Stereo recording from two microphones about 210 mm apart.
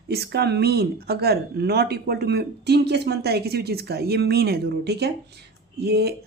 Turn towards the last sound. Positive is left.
turn(degrees=-50)  # may be behind; listen again after turning